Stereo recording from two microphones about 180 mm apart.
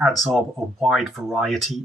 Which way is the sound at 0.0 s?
Centre (ahead or behind).